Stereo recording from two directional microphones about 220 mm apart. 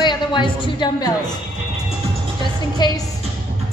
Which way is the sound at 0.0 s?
20° left (ahead or behind).